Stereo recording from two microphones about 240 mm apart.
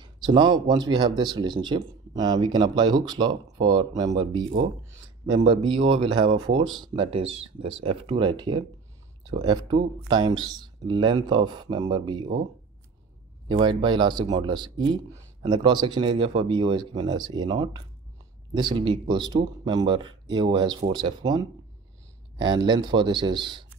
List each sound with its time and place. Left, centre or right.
0.0 s speech: centre
13.5 s speech: centre